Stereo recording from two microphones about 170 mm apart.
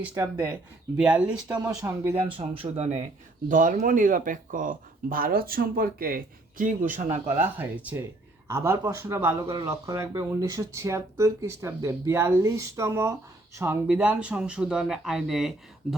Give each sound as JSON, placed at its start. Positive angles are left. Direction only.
{"t": 0.1, "sound": "speech", "side_deg": -15}
{"t": 0.9, "sound": "speech", "side_deg": -5}
{"t": 2.6, "sound": "speech", "side_deg": -40}
{"t": 7.3, "sound": "speech", "side_deg": -10}